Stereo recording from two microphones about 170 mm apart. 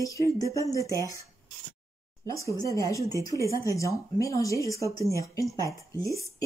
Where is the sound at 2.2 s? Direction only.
20° left (ahead or behind).